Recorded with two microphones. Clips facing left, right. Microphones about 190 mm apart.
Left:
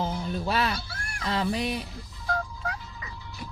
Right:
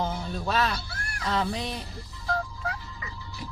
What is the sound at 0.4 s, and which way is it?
Speech, 10° left (ahead or behind).